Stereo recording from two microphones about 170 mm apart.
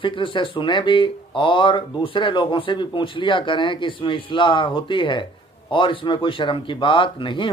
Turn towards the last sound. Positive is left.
turn(degrees=30)  # may be behind; listen again after turning